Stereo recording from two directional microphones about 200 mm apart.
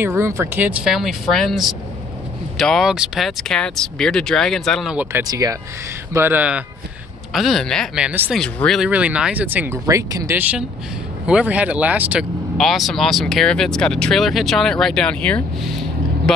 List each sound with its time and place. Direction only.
0.0 s speech: 15° right (ahead or behind)
5.2 s speech: 20° right (ahead or behind); by 16.4 s centre (ahead or behind)